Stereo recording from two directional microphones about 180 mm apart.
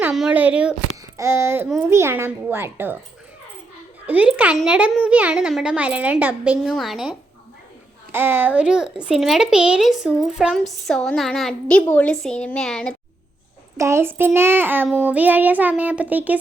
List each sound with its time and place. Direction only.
0.1 s a child's voice: 5° right (ahead or behind)
4.0 s a child's voice: 5° right (ahead or behind)
8.1 s speech: 10° right (ahead or behind); by 13.0 s 5° left (ahead or behind)
13.7 s a child's voice: 15° right (ahead or behind)